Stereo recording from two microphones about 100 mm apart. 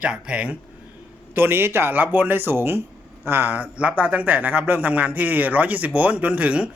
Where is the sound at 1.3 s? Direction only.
20° right (ahead or behind).